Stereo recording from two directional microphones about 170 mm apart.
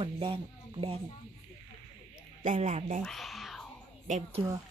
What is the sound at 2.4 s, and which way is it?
Speech, 45° right (ahead or behind).